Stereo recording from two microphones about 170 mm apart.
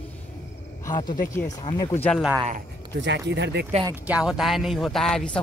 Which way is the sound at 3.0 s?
90° right.